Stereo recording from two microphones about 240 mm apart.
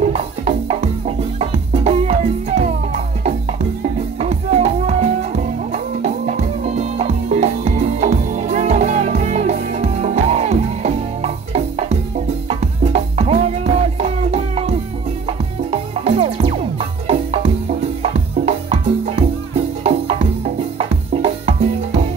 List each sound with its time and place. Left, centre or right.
0.0 s music: right
4.2 s music: right
18.7 s music: right